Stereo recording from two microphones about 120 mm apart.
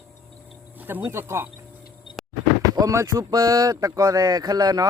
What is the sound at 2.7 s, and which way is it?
Speech, 25° right (ahead or behind).